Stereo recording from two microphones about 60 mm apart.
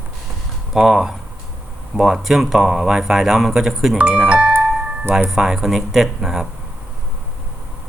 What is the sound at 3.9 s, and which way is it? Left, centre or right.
Speech, right.